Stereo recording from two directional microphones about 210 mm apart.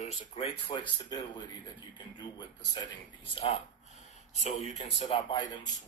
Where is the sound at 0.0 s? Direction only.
30° left (ahead or behind).